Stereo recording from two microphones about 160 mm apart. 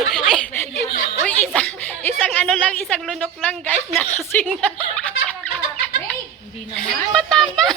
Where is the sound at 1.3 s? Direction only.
10° left (ahead or behind).